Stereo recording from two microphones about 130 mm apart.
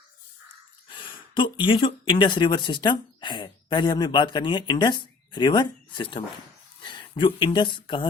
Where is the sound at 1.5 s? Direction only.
40° left (ahead or behind).